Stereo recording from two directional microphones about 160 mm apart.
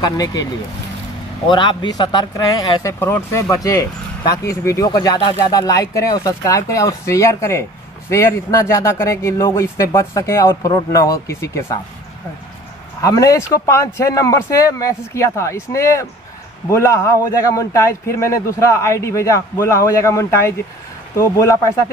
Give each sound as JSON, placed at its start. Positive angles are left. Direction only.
{"t": 0.0, "sound": "speech", "side_deg": 25}
{"t": 1.5, "sound": "speech", "side_deg": 30}
{"t": 13.0, "sound": "speech", "side_deg": 20}